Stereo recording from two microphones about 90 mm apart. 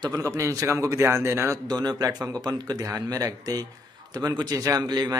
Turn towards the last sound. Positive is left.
turn(degrees=-50)  # may be behind; listen again after turning